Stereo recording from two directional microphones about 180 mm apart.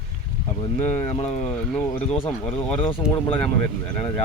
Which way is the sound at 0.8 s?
35° left (ahead or behind).